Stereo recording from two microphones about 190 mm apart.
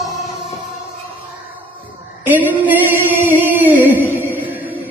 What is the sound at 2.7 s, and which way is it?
Music, 10° right (ahead or behind).